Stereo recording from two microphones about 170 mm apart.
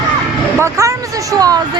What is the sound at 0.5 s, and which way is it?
Speech, 15° right (ahead or behind).